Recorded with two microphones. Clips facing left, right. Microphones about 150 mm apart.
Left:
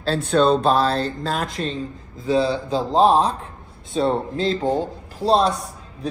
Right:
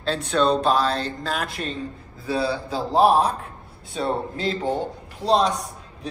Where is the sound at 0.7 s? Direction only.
30° left (ahead or behind).